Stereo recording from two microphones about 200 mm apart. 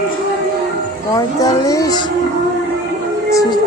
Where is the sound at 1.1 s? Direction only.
15° left (ahead or behind).